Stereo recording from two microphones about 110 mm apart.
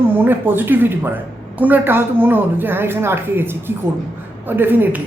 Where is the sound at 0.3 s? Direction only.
20° right (ahead or behind).